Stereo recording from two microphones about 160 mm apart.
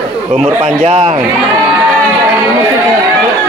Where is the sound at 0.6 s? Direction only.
45° right (ahead or behind).